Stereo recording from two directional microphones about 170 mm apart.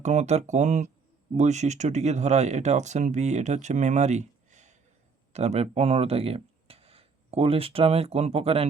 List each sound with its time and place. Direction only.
0.0 s speech: 40° right (ahead or behind)